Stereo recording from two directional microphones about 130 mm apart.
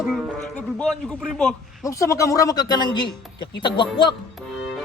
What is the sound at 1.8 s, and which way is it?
Speech, 25° left (ahead or behind).